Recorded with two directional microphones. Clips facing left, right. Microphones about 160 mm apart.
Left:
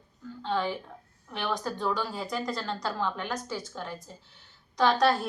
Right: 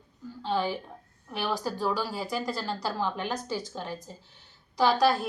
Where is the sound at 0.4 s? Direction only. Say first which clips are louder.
Right 1 dB; 10° right (ahead or behind).